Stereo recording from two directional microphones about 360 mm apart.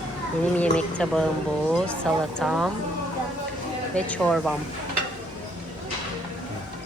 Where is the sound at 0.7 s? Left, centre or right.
Centre.